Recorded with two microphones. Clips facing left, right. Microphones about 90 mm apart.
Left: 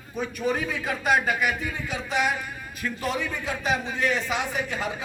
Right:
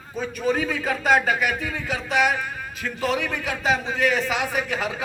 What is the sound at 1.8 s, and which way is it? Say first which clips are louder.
A man's voice: right 4 dB; 85° right.